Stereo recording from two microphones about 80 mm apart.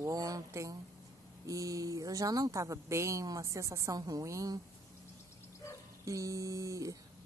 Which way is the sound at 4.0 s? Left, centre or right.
Right.